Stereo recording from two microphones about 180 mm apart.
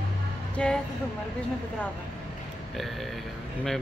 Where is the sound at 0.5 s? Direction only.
5° left (ahead or behind).